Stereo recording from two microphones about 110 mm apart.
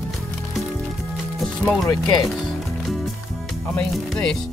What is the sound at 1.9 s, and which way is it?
Speech, 40° left (ahead or behind).